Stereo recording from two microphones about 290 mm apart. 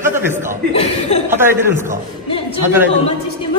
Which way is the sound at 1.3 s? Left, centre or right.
Centre.